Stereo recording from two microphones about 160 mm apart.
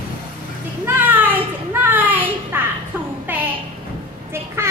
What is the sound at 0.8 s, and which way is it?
Children playing, 10° right (ahead or behind).